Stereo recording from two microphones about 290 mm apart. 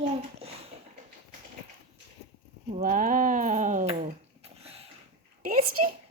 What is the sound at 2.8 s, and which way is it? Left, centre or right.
Speech, right.